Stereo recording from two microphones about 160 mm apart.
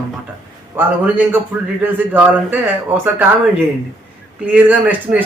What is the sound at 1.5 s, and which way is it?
A man's voice, 5° right (ahead or behind).